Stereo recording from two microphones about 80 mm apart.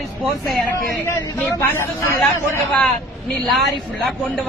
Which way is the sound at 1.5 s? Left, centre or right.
Left.